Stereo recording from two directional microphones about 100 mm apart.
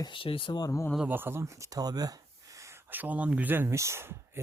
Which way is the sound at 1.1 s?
20° right (ahead or behind).